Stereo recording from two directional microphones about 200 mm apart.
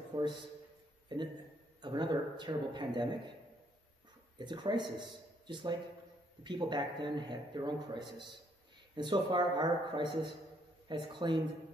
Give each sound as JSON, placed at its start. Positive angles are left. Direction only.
{"t": 0.1, "sound": "a man's voice", "side_deg": -25}
{"t": 1.0, "sound": "a sound", "side_deg": -20}
{"t": 1.8, "sound": "a man's voice", "side_deg": -25}
{"t": 4.4, "sound": "a man's voice", "side_deg": -20}